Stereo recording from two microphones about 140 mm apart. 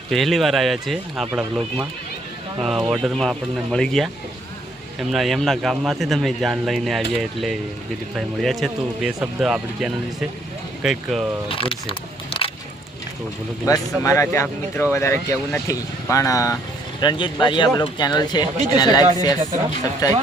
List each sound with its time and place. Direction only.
0.1 s a man's voice: centre (ahead or behind)
11.4 s a sound: 40° left (ahead or behind)
13.7 s speech: 20° left (ahead or behind)
17.0 s speech: 35° left (ahead or behind)